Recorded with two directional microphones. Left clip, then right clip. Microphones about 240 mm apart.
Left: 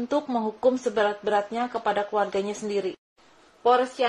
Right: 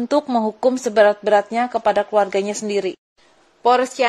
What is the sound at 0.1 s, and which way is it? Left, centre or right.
A woman's voice, right.